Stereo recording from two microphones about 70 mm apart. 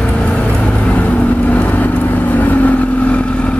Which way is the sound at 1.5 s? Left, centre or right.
Left.